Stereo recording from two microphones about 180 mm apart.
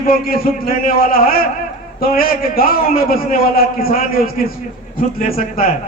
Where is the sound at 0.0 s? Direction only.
55° left (ahead or behind).